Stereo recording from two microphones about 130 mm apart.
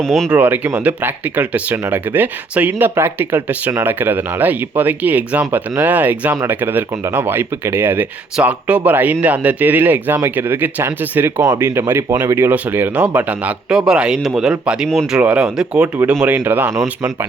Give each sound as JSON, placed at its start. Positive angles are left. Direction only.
{"t": 0.0, "sound": "speech", "side_deg": 5}
{"t": 0.3, "sound": "speech", "side_deg": -15}